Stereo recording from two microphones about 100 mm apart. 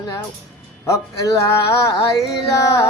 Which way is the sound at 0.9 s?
35° left (ahead or behind).